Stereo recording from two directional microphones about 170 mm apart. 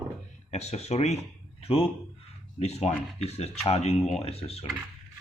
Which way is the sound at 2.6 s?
40° left (ahead or behind).